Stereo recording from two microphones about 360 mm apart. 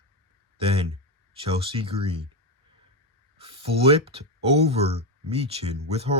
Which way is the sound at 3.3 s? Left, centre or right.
Centre.